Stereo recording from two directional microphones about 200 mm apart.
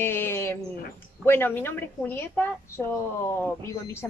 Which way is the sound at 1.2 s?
10° left (ahead or behind).